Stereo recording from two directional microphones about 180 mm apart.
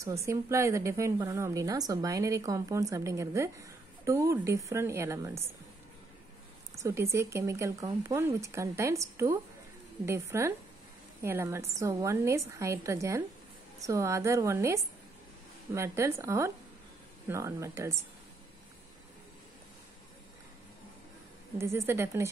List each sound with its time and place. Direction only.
0.0 s a woman's voice: 15° right (ahead or behind)
6.7 s a woman's voice: 15° right (ahead or behind)
21.5 s a woman's voice: 15° right (ahead or behind)